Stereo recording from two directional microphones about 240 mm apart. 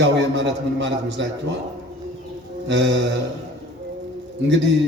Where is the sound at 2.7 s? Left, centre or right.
Right.